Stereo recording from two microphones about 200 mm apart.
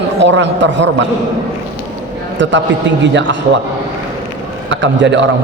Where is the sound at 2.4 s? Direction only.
65° right (ahead or behind).